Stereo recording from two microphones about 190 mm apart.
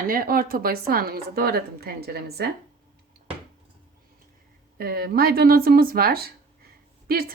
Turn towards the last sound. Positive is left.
turn(degrees=-50)  # may be behind; listen again after turning